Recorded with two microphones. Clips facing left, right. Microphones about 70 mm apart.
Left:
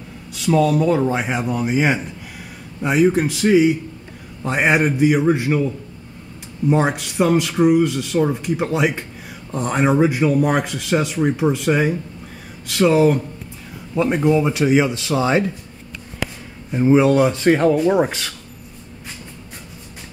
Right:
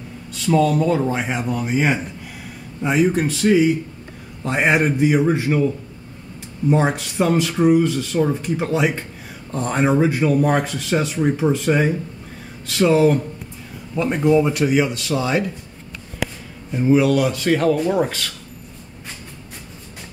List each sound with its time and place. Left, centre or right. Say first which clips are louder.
0.3 s speech: left 1 dB; centre
6.7 s speech: even; centre
16.7 s speech: left 2 dB; left